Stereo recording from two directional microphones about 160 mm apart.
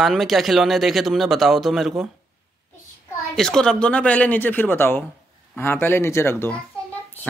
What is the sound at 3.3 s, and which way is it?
Speech, 5° left (ahead or behind).